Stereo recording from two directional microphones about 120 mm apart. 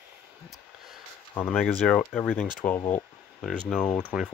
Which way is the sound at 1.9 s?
15° left (ahead or behind).